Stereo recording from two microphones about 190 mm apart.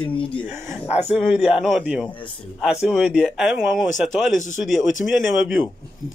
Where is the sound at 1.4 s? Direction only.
Centre (ahead or behind).